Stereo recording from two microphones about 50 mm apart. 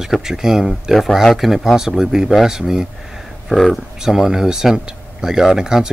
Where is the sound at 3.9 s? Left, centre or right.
Centre.